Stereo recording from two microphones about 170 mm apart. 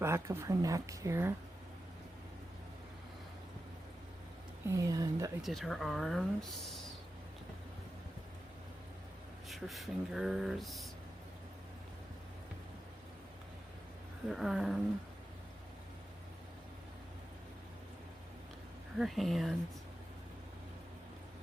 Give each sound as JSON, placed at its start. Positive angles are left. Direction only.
{"t": 0.0, "sound": "a woman's voice", "side_deg": -15}
{"t": 4.7, "sound": "speech", "side_deg": -20}
{"t": 5.4, "sound": "speech", "side_deg": 0}
{"t": 9.5, "sound": "speech", "side_deg": 0}
{"t": 14.3, "sound": "speech", "side_deg": 0}
{"t": 18.9, "sound": "speech", "side_deg": 0}